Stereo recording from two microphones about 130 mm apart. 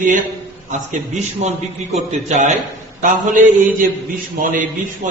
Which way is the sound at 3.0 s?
90° right.